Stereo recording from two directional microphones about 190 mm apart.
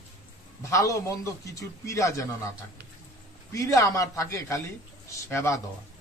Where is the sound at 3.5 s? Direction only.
15° left (ahead or behind).